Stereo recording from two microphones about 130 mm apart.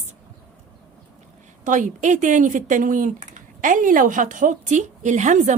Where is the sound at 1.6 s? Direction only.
80° right.